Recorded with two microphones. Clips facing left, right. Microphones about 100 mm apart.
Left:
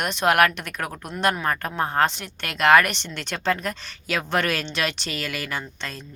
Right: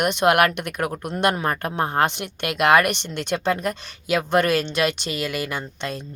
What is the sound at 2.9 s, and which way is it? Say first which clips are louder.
Speech: right 5 dB; 55° right (ahead or behind).